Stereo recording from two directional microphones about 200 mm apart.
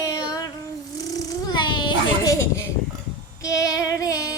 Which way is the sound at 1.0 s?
20° left (ahead or behind).